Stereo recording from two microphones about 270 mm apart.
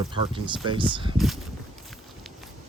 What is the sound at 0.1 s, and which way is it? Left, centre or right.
Speech, centre.